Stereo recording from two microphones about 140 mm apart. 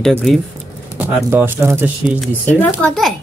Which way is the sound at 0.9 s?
15° right (ahead or behind).